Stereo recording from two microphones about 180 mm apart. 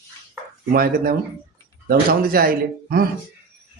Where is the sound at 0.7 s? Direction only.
55° right (ahead or behind).